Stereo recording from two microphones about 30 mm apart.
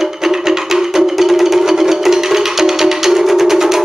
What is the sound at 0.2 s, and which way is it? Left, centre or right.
Music, centre.